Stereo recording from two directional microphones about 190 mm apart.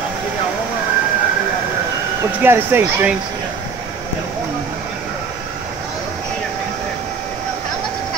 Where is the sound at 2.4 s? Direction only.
10° right (ahead or behind).